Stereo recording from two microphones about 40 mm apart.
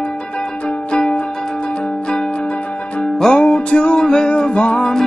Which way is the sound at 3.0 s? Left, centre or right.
Centre.